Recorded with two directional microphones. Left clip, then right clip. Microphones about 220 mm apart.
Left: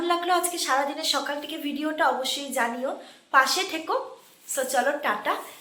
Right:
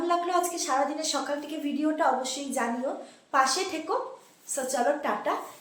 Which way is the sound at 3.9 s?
5° right (ahead or behind).